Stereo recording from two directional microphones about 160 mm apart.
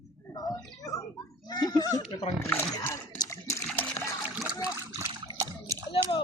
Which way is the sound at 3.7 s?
10° left (ahead or behind).